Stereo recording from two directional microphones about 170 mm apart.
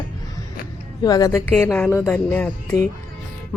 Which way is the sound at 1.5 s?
10° left (ahead or behind).